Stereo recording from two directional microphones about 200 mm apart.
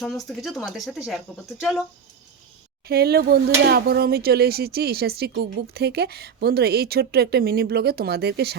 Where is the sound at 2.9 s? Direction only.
50° right (ahead or behind).